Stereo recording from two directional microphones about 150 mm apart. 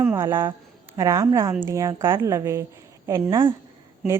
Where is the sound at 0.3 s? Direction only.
30° right (ahead or behind).